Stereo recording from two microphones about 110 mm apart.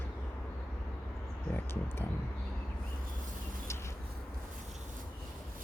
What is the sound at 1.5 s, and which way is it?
Speech, 20° left (ahead or behind).